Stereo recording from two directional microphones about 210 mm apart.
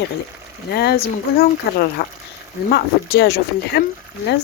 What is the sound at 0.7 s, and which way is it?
A woman's voice, 50° left (ahead or behind).